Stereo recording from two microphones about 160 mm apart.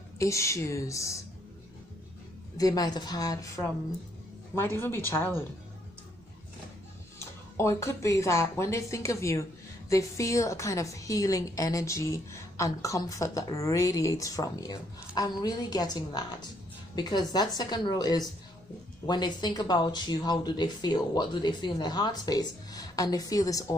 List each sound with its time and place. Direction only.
0.2 s speech: 20° left (ahead or behind)
2.5 s speech: 25° left (ahead or behind)
7.2 s speech: 15° left (ahead or behind)